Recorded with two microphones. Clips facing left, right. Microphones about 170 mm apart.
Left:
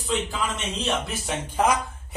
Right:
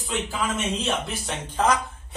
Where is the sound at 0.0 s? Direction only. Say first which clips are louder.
Left 1 dB; centre (ahead or behind).